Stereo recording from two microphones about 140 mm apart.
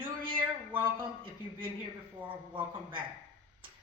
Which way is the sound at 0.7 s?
15° right (ahead or behind).